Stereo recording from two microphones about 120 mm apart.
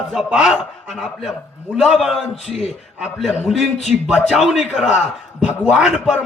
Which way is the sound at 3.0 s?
5° right (ahead or behind).